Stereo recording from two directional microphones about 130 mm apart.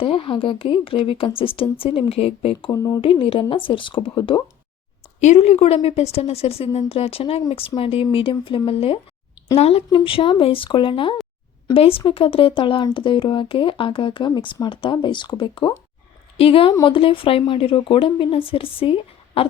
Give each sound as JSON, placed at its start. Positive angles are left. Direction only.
{"t": 0.0, "sound": "a woman's voice", "side_deg": 45}
{"t": 2.6, "sound": "speech", "side_deg": 25}
{"t": 3.0, "sound": "a woman's voice", "side_deg": 45}
{"t": 5.2, "sound": "a woman's voice", "side_deg": 60}
{"t": 9.9, "sound": "a woman's voice", "side_deg": 40}